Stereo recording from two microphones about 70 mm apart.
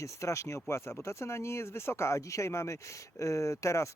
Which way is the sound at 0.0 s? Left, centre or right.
Left.